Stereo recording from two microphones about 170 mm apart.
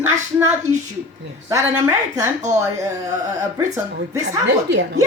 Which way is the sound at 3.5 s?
20° right (ahead or behind).